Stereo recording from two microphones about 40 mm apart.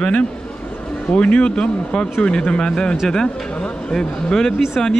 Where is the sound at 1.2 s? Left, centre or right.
Left.